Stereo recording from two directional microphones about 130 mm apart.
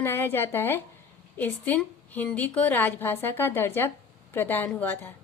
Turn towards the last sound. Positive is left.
turn(degrees=15)  # may be behind; listen again after turning